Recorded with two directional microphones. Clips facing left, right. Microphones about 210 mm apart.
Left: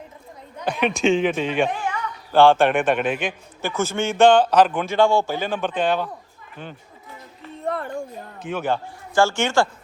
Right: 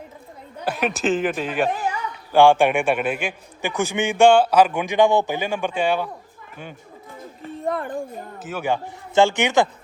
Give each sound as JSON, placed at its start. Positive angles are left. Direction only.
{"t": 0.6, "sound": "a man's voice", "side_deg": -5}
{"t": 7.6, "sound": "a sound", "side_deg": -15}
{"t": 7.9, "sound": "a man's voice", "side_deg": -5}